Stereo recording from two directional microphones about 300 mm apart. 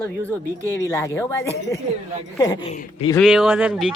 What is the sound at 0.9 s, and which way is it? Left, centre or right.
Speech, centre.